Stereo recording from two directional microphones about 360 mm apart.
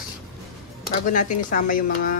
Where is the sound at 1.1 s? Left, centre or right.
Left.